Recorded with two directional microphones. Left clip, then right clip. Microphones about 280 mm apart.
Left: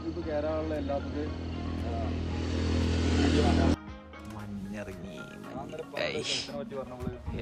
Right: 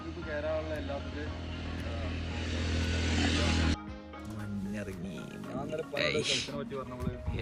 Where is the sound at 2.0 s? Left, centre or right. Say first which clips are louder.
Left 3 dB; left.